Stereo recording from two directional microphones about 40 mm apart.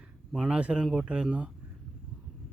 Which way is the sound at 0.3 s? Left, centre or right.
Right.